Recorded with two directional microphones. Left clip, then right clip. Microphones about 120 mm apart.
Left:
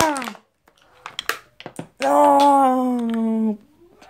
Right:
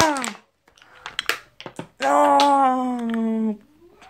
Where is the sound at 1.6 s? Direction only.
40° left (ahead or behind).